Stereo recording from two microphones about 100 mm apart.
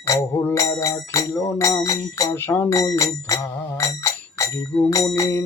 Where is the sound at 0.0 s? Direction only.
25° left (ahead or behind).